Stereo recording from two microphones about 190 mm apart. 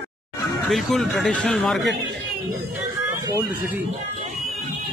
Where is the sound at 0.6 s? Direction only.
Centre (ahead or behind).